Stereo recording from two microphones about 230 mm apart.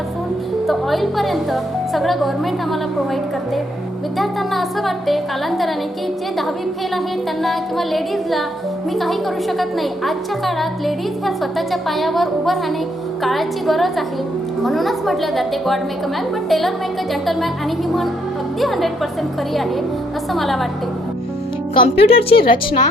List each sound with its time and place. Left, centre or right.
0.7 s a woman's voice: centre
4.2 s a woman's voice: centre
7.4 s a woman's voice: centre
20.3 s a woman's voice: centre
21.8 s a woman's voice: left